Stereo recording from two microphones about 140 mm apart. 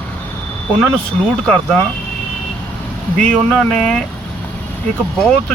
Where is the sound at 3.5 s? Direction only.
5° left (ahead or behind).